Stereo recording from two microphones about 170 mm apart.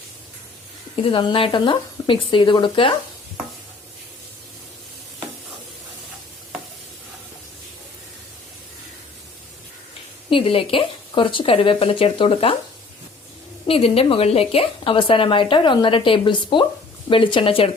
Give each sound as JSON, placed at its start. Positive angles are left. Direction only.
{"t": 0.9, "sound": "speech", "side_deg": 30}
{"t": 10.2, "sound": "a woman's voice", "side_deg": 30}
{"t": 13.7, "sound": "a woman's voice", "side_deg": 35}